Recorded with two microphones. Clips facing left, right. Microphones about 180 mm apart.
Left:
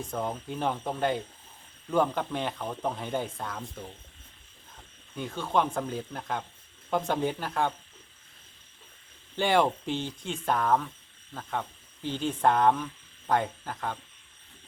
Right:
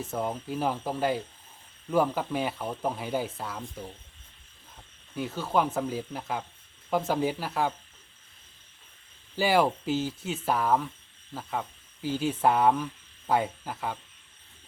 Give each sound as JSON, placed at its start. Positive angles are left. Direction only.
{"t": 0.0, "sound": "speech", "side_deg": -5}
{"t": 5.1, "sound": "speech", "side_deg": -5}
{"t": 9.3, "sound": "speech", "side_deg": -5}
{"t": 12.0, "sound": "speech", "side_deg": -5}